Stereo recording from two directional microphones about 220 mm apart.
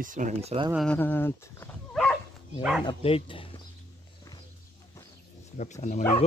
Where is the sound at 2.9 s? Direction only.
25° left (ahead or behind).